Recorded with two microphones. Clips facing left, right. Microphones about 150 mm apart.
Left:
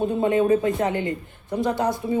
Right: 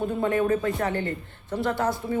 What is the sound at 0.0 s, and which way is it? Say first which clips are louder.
A man's voice: left 4 dB; 20° left (ahead or behind).